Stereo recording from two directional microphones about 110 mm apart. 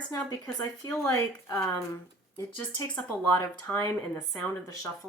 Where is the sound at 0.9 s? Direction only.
25° left (ahead or behind).